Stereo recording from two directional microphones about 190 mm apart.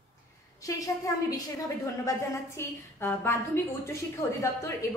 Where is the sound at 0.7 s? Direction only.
15° left (ahead or behind).